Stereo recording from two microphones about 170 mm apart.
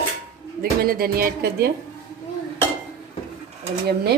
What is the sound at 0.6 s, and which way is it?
Speech, 60° right (ahead or behind).